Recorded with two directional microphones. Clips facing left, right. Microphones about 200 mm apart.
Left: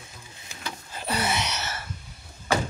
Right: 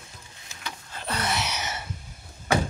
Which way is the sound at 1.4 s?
15° right (ahead or behind).